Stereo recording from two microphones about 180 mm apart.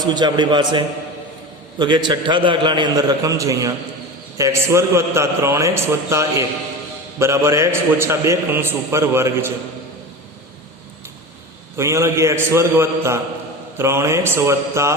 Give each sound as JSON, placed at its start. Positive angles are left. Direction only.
{"t": 0.0, "sound": "a man's voice", "side_deg": -25}
{"t": 11.8, "sound": "a man's voice", "side_deg": -15}